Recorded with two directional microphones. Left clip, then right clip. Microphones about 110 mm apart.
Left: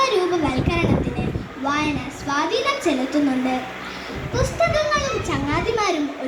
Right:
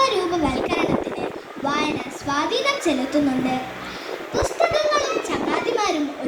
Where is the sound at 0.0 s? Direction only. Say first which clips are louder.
Left 1 dB; 35° right (ahead or behind).